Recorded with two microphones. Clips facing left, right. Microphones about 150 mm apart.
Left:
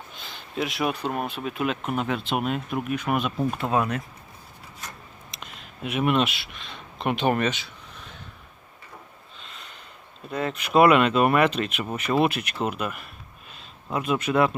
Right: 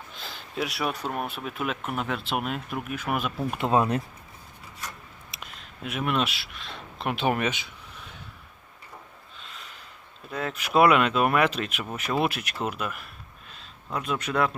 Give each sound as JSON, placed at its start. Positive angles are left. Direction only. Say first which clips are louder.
{"t": 0.2, "sound": "a sound", "louder": "left 2 dB", "side_deg": 0}
{"t": 1.0, "sound": "speech", "louder": "left 3 dB", "side_deg": 0}
{"t": 3.6, "sound": "speech", "louder": "right 5 dB", "side_deg": -25}
{"t": 5.3, "sound": "speech", "louder": "left 1 dB", "side_deg": 0}
{"t": 9.4, "sound": "snort", "louder": "even", "side_deg": 0}
{"t": 10.2, "sound": "speech", "louder": "left 3 dB", "side_deg": 0}